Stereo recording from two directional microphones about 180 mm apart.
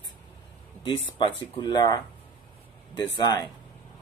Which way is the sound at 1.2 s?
25° left (ahead or behind).